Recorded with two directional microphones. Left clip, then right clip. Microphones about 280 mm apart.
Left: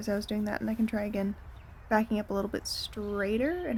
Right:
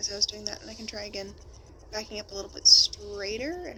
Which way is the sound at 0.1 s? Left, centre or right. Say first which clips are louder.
Right 1 dB; centre.